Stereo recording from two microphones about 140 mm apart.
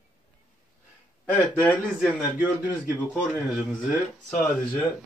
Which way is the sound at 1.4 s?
10° left (ahead or behind).